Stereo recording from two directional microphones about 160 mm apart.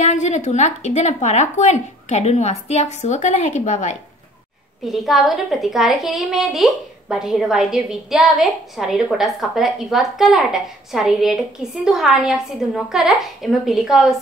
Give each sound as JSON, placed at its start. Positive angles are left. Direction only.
{"t": 0.0, "sound": "speech", "side_deg": 50}
{"t": 4.8, "sound": "a woman's voice", "side_deg": 0}